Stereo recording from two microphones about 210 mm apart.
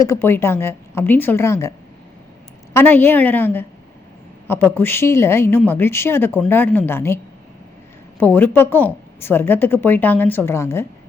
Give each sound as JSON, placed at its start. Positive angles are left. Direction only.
{"t": 0.0, "sound": "a woman's voice", "side_deg": 10}
{"t": 2.7, "sound": "a woman's voice", "side_deg": 10}
{"t": 8.2, "sound": "a woman's voice", "side_deg": 10}